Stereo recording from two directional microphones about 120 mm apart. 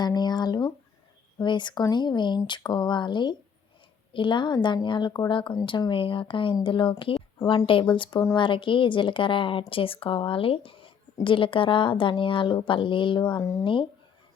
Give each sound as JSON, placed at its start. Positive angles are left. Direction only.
{"t": 0.0, "sound": "a woman's voice", "side_deg": 35}
{"t": 13.4, "sound": "speech", "side_deg": 25}